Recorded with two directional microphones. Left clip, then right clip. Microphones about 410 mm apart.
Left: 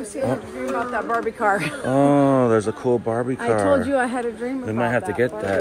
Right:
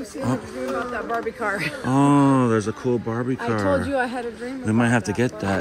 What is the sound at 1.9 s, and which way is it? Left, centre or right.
Speech, centre.